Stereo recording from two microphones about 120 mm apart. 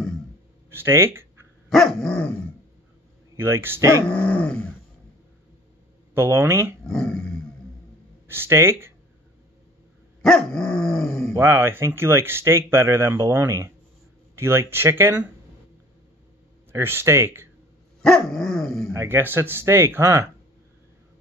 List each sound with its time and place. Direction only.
0.7 s speech: 20° right (ahead or behind)
1.7 s dog: 5° left (ahead or behind)
3.3 s speech: 20° right (ahead or behind)
4.0 s speech: 10° left (ahead or behind)
6.1 s speech: 20° right (ahead or behind)
6.9 s dog: 5° left (ahead or behind)
8.3 s speech: 20° right (ahead or behind)
10.2 s dog: 5° left (ahead or behind)
11.3 s speech: 20° right (ahead or behind)
16.7 s speech: 20° right (ahead or behind)
18.0 s dog: 5° left (ahead or behind)
18.9 s speech: 20° right (ahead or behind)